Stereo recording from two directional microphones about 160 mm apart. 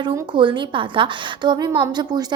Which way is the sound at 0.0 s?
30° right (ahead or behind).